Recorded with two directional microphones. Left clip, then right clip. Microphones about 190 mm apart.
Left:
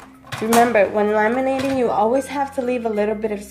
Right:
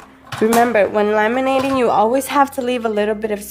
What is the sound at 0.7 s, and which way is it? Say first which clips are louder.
Speech: right 2 dB; 40° right (ahead or behind).